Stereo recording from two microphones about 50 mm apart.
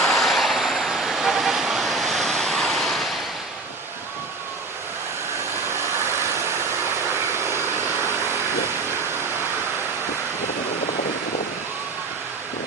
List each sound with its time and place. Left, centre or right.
0.0 s vehicle: centre
7.3 s vehicle: right